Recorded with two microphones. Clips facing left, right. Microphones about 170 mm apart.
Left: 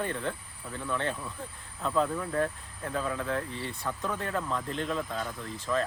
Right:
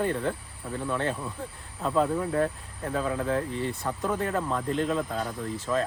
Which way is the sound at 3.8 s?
30° right (ahead or behind).